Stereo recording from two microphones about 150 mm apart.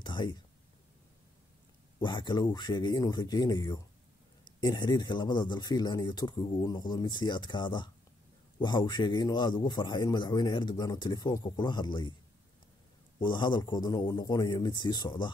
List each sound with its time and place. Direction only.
0.0 s a sound: 30° left (ahead or behind)
2.0 s a man's voice: 30° left (ahead or behind)
13.2 s a man's voice: 30° left (ahead or behind)